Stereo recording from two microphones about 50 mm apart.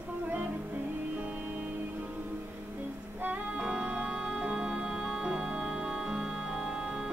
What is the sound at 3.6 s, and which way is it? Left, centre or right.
Music, centre.